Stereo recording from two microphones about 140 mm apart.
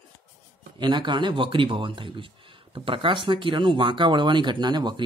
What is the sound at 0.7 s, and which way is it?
Speech, 30° right (ahead or behind).